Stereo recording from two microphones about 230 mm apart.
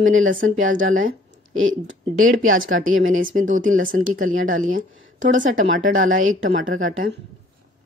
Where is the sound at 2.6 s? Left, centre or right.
Right.